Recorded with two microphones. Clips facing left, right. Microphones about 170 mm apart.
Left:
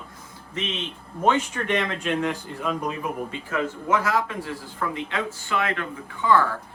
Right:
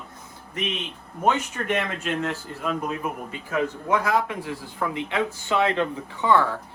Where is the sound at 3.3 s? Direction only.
10° right (ahead or behind).